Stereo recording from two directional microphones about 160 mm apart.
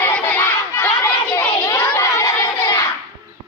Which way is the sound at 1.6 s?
15° left (ahead or behind).